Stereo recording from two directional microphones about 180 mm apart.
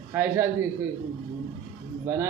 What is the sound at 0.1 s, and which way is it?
Speech, 10° right (ahead or behind).